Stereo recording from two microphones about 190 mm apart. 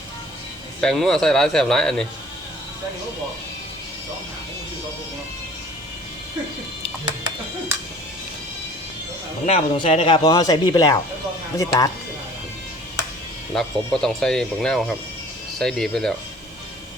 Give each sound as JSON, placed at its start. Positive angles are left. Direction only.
{"t": 0.8, "sound": "speech", "side_deg": 0}
{"t": 9.5, "sound": "speech", "side_deg": 30}
{"t": 13.5, "sound": "speech", "side_deg": 5}